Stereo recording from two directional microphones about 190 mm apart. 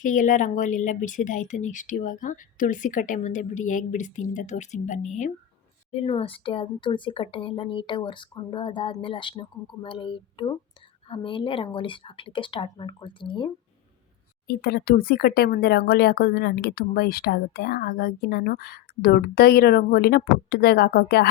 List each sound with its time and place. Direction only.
0.0 s speech: 45° left (ahead or behind); by 13.5 s 25° left (ahead or behind)
14.4 s speech: 55° left (ahead or behind)